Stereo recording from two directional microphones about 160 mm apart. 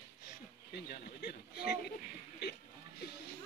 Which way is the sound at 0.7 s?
90° left.